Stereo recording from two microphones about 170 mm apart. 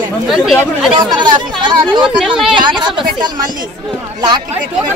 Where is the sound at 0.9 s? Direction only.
25° right (ahead or behind).